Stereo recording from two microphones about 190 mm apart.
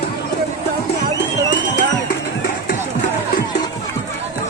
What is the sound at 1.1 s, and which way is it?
Music, 70° left (ahead or behind).